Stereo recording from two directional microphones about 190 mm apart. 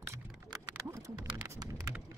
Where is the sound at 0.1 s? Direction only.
15° right (ahead or behind).